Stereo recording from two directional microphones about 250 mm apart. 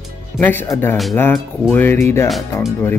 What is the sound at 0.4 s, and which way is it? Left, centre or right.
Speech, centre.